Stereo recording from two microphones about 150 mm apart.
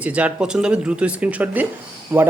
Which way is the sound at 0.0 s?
10° right (ahead or behind).